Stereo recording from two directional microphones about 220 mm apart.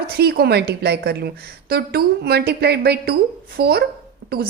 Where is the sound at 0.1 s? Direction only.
45° right (ahead or behind).